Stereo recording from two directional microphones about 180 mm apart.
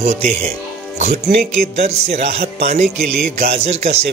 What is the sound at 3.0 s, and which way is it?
Speech, centre (ahead or behind).